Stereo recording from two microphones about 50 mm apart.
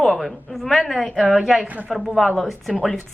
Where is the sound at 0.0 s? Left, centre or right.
Centre.